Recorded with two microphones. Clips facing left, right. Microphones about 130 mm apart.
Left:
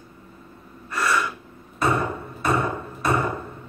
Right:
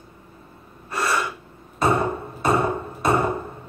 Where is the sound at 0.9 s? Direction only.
30° right (ahead or behind).